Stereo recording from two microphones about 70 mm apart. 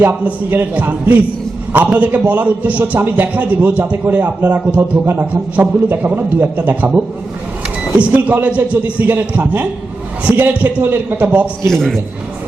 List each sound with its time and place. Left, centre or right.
0.0 s a man's voice: right
11.7 s a man's voice: centre